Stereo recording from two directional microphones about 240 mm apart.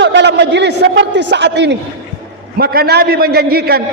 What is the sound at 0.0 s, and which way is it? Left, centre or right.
A man's voice, right.